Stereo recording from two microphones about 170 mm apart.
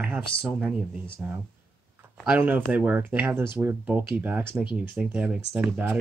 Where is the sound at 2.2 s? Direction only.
10° right (ahead or behind).